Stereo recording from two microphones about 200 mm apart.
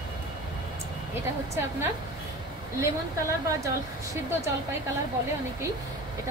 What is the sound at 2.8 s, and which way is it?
Speech, 15° right (ahead or behind).